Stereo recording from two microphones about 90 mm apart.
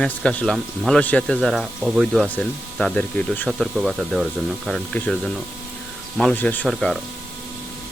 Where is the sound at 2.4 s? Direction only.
10° left (ahead or behind).